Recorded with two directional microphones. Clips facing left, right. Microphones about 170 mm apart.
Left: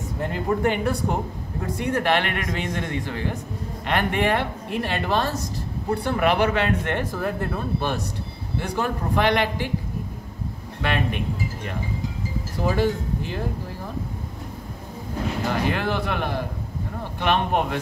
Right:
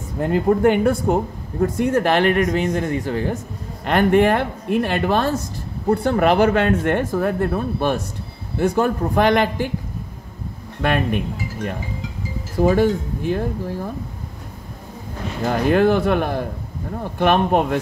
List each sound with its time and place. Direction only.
0.3 s a man's voice: 50° right (ahead or behind)
10.8 s speech: 50° right (ahead or behind)
12.6 s speech: 50° right (ahead or behind)
15.5 s speech: 50° right (ahead or behind)